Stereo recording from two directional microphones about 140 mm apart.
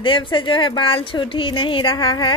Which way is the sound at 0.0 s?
35° left (ahead or behind).